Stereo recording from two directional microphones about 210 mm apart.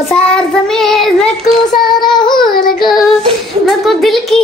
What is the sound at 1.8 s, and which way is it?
Child singing, 20° left (ahead or behind).